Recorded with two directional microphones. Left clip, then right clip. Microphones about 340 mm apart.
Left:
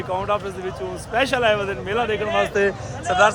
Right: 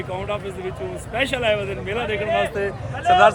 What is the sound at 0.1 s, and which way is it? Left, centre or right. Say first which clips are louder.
Speech: left 6 dB; centre.